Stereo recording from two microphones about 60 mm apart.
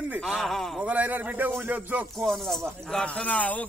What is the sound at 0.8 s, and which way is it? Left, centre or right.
A man's voice, right.